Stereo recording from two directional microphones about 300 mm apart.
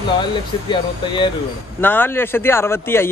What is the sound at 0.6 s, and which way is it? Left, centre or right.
A man's voice, centre.